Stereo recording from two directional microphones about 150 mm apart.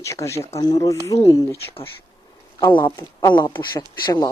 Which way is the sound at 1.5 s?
40° left (ahead or behind).